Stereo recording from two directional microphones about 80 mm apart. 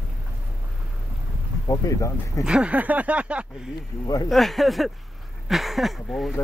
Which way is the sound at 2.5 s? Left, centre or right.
Centre.